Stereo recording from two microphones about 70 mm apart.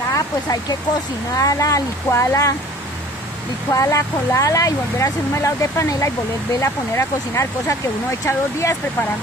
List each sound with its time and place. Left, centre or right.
0.1 s speech: left
3.7 s speech: left